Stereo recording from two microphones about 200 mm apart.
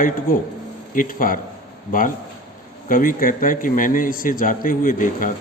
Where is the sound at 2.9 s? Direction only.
45° left (ahead or behind).